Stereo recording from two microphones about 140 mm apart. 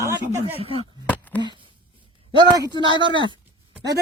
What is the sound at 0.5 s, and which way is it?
Speech, 45° right (ahead or behind).